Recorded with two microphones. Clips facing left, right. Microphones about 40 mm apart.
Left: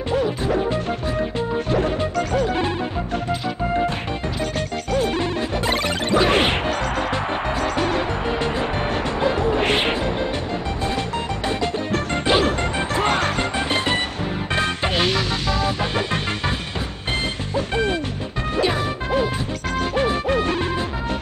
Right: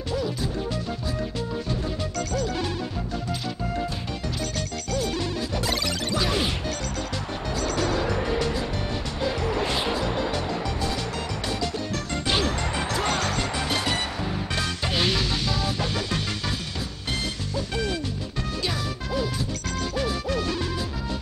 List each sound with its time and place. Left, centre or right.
2.1 s music: left
4.9 s music: left
7.6 s music: left
9.6 s music: left
11.4 s music: left
17.6 s music: left